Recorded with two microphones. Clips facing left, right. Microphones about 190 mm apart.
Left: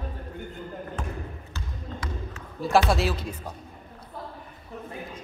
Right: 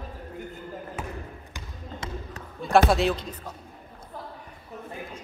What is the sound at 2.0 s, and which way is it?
Basketball bounce, 25° right (ahead or behind).